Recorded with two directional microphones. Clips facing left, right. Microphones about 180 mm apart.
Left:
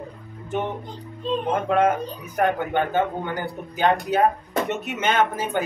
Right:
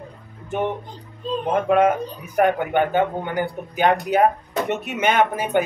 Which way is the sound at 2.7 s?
15° right (ahead or behind).